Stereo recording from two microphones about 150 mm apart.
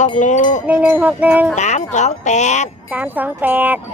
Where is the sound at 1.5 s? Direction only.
50° left (ahead or behind).